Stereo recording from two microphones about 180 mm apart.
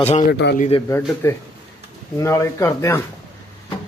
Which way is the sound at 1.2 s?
15° left (ahead or behind).